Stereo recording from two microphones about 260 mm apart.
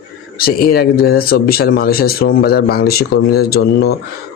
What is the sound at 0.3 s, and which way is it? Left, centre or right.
Speech, left.